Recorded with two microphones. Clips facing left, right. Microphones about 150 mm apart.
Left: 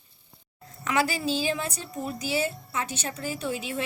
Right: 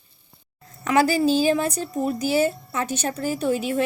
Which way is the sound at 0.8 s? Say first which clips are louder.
Right 8 dB; 40° right (ahead or behind).